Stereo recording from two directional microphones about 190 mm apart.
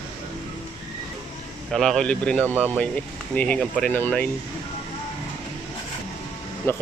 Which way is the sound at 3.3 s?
5° left (ahead or behind).